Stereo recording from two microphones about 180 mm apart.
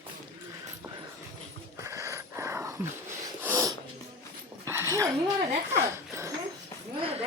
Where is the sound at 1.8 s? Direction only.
15° right (ahead or behind).